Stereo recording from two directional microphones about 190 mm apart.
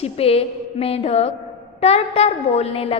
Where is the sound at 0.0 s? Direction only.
30° left (ahead or behind).